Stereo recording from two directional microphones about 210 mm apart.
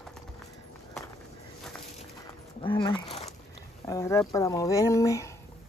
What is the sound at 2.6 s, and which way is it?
Speech, 25° left (ahead or behind).